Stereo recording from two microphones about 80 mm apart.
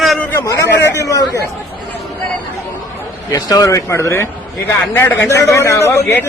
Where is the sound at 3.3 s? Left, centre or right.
Left.